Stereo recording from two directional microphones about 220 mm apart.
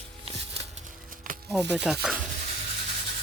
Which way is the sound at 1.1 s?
40° right (ahead or behind).